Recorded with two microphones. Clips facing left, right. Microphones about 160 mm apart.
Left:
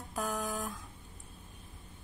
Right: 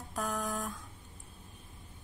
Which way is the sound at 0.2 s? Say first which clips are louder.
Even; centre (ahead or behind).